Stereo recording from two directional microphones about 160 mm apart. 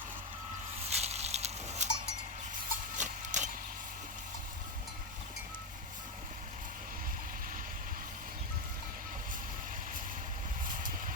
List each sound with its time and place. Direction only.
0.9 s a sound: 40° right (ahead or behind)
2.9 s clip-clop: 50° right (ahead or behind)
10.7 s vehicle: 55° right (ahead or behind)